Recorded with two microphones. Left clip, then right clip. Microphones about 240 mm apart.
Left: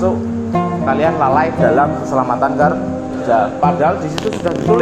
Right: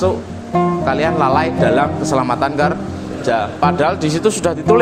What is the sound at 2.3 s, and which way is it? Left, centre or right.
A man's voice, right.